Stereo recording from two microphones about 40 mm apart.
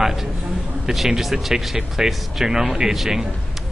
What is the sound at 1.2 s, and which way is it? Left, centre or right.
Speech, centre.